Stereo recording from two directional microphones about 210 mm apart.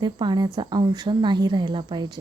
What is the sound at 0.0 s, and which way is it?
A woman's voice, 20° right (ahead or behind).